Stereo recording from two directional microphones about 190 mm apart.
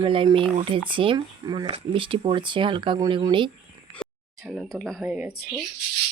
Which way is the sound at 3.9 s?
Centre (ahead or behind).